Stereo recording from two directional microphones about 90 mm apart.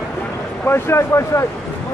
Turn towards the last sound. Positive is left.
turn(degrees=30)  # may be behind; listen again after turning